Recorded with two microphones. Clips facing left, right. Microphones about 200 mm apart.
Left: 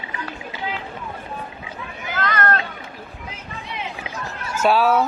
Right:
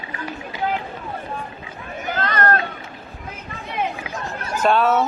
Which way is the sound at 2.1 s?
35° right (ahead or behind).